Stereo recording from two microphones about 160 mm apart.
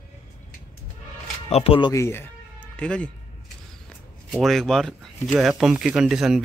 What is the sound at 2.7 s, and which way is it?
Speech, 5° left (ahead or behind).